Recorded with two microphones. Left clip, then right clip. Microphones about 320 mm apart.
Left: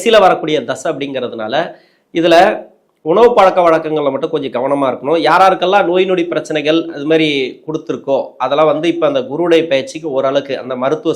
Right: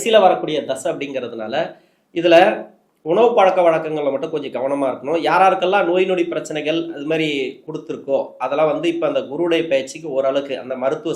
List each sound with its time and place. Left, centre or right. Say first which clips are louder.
0.0 s speech: left 4 dB; left